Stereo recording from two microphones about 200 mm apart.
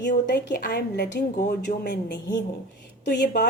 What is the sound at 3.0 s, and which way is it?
Speech, 60° left (ahead or behind).